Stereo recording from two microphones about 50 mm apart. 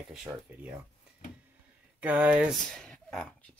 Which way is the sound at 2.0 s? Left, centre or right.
Right.